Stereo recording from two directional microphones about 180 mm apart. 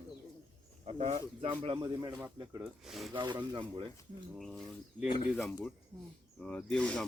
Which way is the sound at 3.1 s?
25° right (ahead or behind).